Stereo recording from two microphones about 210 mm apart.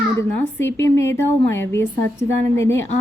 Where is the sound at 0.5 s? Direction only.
10° left (ahead or behind).